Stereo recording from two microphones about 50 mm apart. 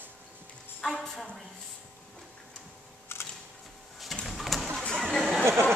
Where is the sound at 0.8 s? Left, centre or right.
Centre.